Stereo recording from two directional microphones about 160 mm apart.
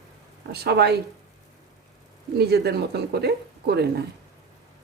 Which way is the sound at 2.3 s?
90° right.